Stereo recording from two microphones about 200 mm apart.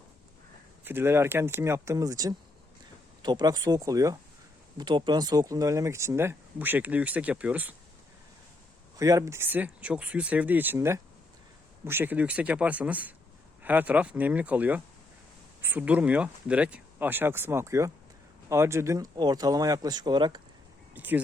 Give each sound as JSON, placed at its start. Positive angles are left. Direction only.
{"t": 0.9, "sound": "speech", "side_deg": -10}
{"t": 9.0, "sound": "speech", "side_deg": -15}
{"t": 20.9, "sound": "speech", "side_deg": -10}